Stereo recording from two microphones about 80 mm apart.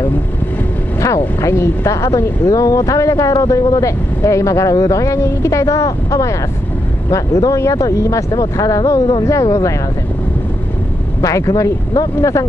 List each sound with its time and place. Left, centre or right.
1.0 s speech: left
11.1 s speech: left